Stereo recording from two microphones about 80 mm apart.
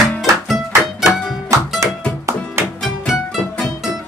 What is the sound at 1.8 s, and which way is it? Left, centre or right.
Music, right.